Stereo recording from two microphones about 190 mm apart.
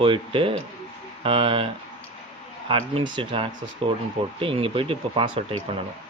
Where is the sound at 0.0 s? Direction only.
25° right (ahead or behind).